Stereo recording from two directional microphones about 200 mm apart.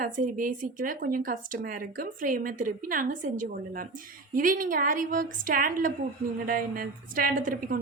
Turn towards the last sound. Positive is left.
turn(degrees=-45)  # may be behind; listen again after turning